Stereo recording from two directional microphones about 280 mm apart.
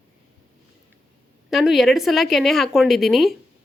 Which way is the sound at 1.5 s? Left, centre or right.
Centre.